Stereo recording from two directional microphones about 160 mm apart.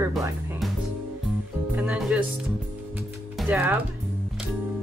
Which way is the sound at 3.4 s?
10° right (ahead or behind).